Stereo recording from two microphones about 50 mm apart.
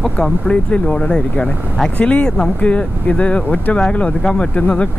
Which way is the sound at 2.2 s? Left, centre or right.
Centre.